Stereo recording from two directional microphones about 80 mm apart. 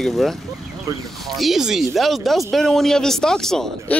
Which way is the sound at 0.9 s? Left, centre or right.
Right.